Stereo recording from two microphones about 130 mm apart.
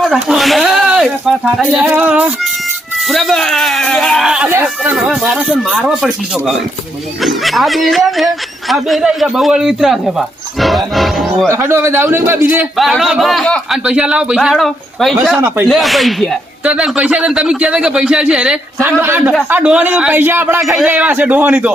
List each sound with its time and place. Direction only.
0.0 s a man's voice: centre (ahead or behind)
11.4 s a man's voice: 20° right (ahead or behind)
12.7 s a man's voice: centre (ahead or behind)